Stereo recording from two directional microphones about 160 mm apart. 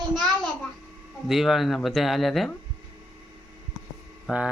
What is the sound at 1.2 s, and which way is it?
Speech, centre (ahead or behind).